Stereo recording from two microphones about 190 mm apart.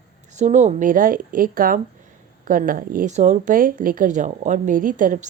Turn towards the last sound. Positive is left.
turn(degrees=-45)  # may be behind; listen again after turning